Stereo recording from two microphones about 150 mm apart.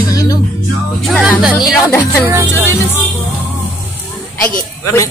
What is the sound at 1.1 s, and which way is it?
Music, centre (ahead or behind).